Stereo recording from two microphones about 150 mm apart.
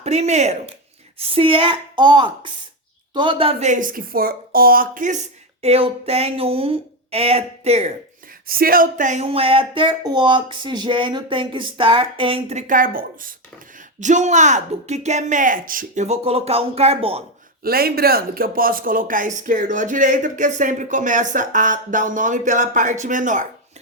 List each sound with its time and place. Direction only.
0.0 s speech: 50° right (ahead or behind)
1.2 s speech: 40° right (ahead or behind)
3.7 s speech: 65° right (ahead or behind)
5.6 s speech: 40° right (ahead or behind)
8.4 s speech: 80° right; by 12.5 s 35° right (ahead or behind)
12.5 s speech: 60° right (ahead or behind)
13.7 s speech: 55° right (ahead or behind)
16.0 s speech: 45° right (ahead or behind)
17.6 s speech: 85° right; by 23.5 s 60° right (ahead or behind)